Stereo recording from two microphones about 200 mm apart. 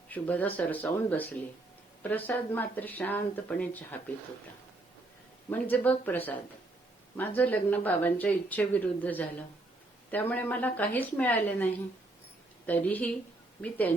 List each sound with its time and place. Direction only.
0.1 s speech: 10° left (ahead or behind)
5.5 s speech: 10° left (ahead or behind)